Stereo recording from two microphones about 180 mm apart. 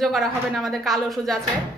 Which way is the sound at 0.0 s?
Centre (ahead or behind).